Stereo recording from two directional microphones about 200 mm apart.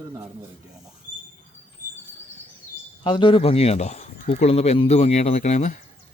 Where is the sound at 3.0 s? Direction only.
25° left (ahead or behind).